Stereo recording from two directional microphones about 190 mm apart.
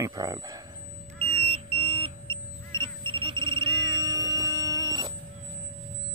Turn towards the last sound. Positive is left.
turn(degrees=-20)  # may be behind; listen again after turning